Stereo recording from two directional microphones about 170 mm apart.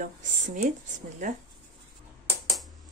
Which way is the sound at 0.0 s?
45° right (ahead or behind).